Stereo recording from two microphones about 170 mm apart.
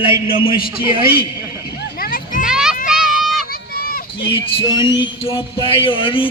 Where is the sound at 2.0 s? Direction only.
60° left (ahead or behind).